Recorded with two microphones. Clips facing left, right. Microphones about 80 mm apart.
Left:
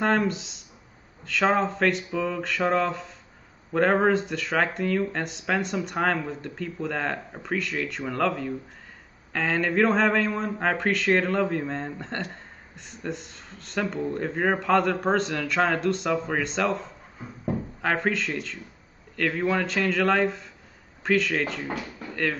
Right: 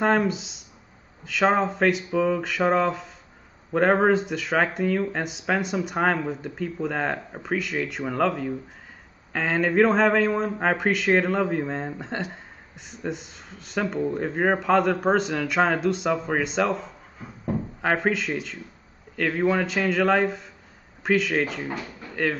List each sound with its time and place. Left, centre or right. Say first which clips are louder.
0.0 s a man's voice: right 2 dB; centre